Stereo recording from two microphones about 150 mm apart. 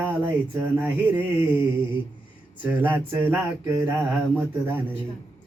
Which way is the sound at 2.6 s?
10° right (ahead or behind).